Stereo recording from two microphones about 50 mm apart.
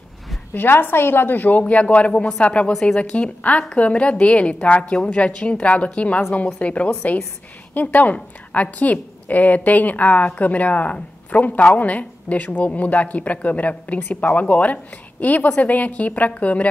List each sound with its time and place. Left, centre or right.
0.6 s a woman's voice: left; by 3.0 s centre
3.0 s a woman's voice: left